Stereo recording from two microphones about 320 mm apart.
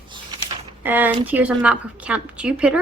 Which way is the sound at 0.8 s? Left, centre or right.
Centre.